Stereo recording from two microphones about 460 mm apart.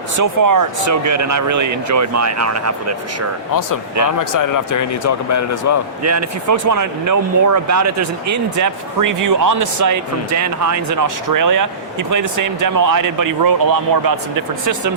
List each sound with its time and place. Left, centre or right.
0.2 s speech: right
4.2 s speech: left
6.0 s speech: right